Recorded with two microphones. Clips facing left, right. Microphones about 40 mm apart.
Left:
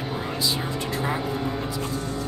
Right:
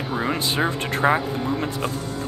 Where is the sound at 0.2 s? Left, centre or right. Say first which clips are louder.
Right 7 dB; right.